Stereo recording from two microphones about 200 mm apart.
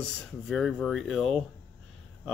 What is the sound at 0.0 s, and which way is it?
Speech, centre (ahead or behind).